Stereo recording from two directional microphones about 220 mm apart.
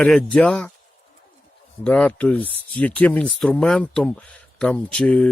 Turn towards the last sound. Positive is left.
turn(degrees=5)  # may be behind; listen again after turning